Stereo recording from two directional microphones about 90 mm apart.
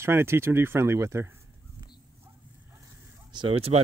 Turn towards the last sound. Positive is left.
turn(degrees=-90)